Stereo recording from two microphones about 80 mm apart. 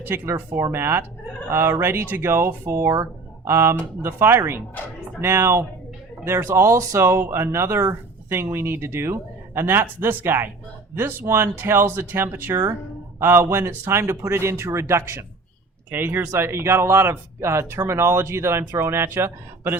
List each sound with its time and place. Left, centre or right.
0.0 s speech: right